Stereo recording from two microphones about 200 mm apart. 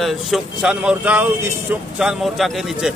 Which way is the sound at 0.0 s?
Centre (ahead or behind).